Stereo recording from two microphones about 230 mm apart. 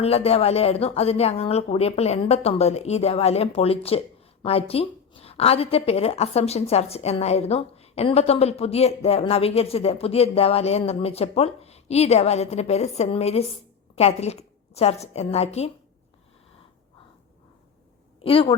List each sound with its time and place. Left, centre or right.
0.0 s speech: left
18.2 s a woman's voice: left